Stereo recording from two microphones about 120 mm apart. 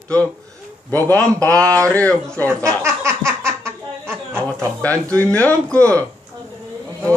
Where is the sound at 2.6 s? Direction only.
25° right (ahead or behind).